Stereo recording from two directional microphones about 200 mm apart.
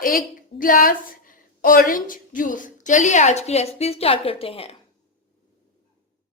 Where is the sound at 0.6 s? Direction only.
45° left (ahead or behind); by 4.7 s 30° left (ahead or behind).